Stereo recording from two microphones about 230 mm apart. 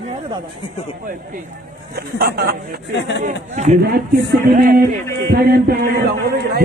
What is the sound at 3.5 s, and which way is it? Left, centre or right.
Speech, right.